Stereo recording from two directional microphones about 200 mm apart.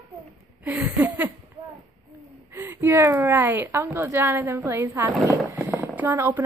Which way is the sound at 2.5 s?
10° right (ahead or behind).